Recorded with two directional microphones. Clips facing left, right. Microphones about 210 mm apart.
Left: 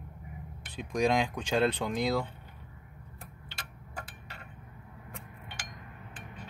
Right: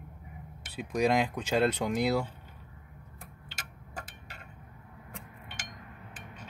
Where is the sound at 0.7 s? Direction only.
5° right (ahead or behind).